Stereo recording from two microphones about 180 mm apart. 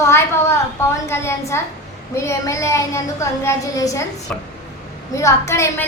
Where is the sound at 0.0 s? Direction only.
15° left (ahead or behind).